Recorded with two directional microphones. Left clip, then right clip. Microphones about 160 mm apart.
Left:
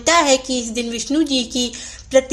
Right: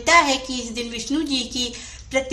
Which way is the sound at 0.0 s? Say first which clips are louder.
Left 2 dB; 30° left (ahead or behind).